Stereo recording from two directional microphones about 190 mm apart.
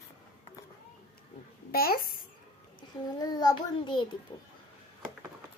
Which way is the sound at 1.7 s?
50° left (ahead or behind).